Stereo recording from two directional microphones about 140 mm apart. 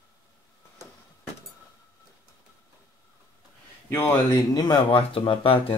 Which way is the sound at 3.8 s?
15° left (ahead or behind).